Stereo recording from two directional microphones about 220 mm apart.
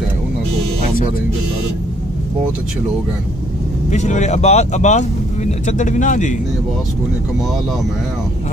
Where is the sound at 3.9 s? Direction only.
30° left (ahead or behind).